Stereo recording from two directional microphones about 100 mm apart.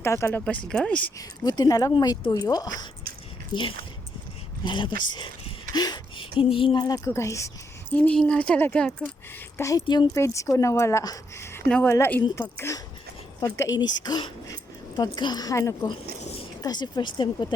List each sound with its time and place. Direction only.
0.0 s speech: 25° left (ahead or behind)
0.3 s speech: 15° left (ahead or behind)
1.5 s speech: 40° left (ahead or behind)
3.5 s a sound: 55° left (ahead or behind)
4.6 s speech: 55° left (ahead or behind)
6.4 s a sound: 65° left (ahead or behind)
6.8 s a woman's voice: 35° left (ahead or behind)
7.9 s speech: 10° left (ahead or behind)
9.6 s speech: 30° left (ahead or behind)
9.8 s speech: 50° left (ahead or behind)
10.2 s a woman's voice: 30° left (ahead or behind)
16.6 s speech: 40° left (ahead or behind)